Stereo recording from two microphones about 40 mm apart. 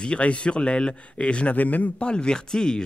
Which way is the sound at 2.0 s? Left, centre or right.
Left.